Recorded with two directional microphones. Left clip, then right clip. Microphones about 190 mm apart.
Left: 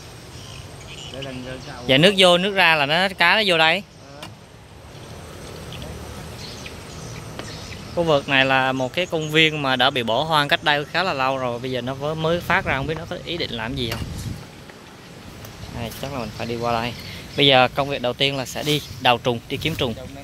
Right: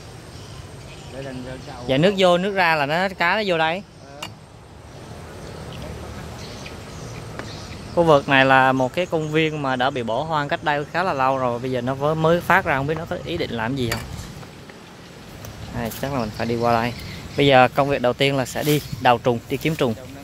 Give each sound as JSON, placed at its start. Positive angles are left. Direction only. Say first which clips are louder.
{"t": 1.9, "sound": "speech", "louder": "left 3 dB", "side_deg": 5}
{"t": 7.9, "sound": "speech", "louder": "right 3 dB", "side_deg": -15}
{"t": 15.8, "sound": "speech", "louder": "right 4 dB", "side_deg": -20}